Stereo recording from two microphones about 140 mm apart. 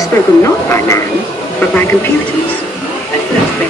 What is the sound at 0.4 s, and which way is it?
Speech, 20° left (ahead or behind).